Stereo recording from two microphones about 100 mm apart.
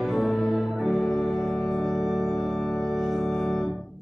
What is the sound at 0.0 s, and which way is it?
Organ, centre (ahead or behind).